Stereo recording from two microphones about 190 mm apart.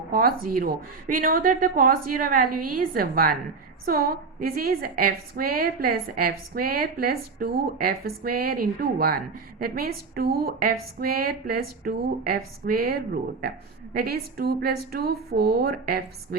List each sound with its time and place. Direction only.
0.1 s a woman's voice: 50° right (ahead or behind)